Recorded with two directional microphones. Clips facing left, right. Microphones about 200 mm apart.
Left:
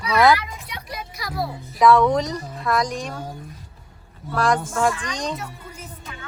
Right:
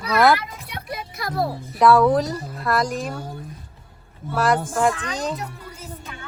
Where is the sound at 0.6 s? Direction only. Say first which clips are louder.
Right 2 dB; 55° right (ahead or behind).